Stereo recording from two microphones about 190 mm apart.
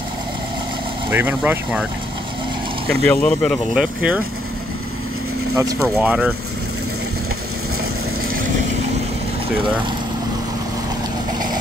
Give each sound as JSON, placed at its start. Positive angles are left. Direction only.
{"t": 1.1, "sound": "speech", "side_deg": -10}
{"t": 2.9, "sound": "speech", "side_deg": 5}
{"t": 5.6, "sound": "speech", "side_deg": -15}